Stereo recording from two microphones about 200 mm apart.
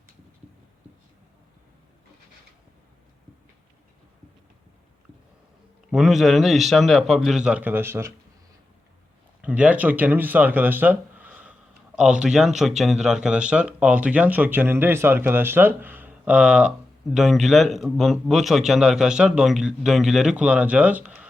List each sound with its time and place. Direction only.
5.9 s a man's voice: centre (ahead or behind)
9.4 s a man's voice: 5° right (ahead or behind)